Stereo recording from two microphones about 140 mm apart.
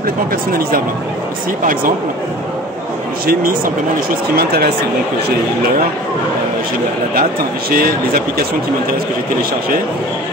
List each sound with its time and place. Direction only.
0.5 s speech: 90° right
7.7 s speech: 90° right